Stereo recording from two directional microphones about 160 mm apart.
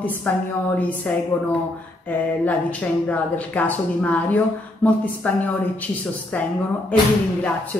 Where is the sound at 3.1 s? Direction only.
10° left (ahead or behind).